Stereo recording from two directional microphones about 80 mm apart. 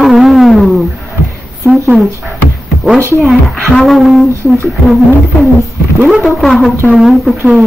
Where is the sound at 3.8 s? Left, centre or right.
Centre.